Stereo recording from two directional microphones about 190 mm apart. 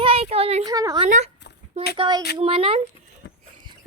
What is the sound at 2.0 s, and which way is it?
Speech, 25° right (ahead or behind).